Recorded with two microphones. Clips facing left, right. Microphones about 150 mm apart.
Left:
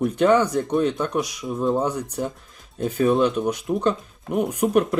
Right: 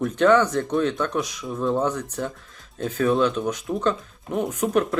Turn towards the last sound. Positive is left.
turn(degrees=15)  # may be behind; listen again after turning